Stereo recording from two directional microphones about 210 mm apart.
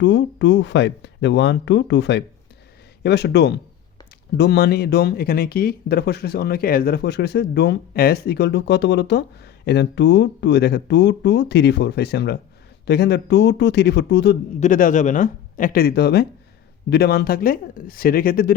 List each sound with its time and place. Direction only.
0.0 s speech: 60° left (ahead or behind)
14.6 s speech: 40° left (ahead or behind)